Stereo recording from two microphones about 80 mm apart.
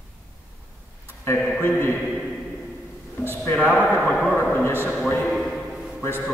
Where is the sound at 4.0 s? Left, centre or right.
Centre.